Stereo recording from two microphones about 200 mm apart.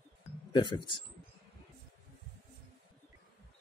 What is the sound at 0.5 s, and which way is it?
Speech, 25° left (ahead or behind).